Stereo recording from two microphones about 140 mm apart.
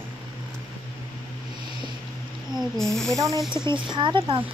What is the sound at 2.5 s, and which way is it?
Speech, 5° left (ahead or behind).